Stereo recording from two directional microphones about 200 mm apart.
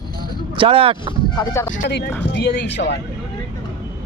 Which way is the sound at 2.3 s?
55° left (ahead or behind).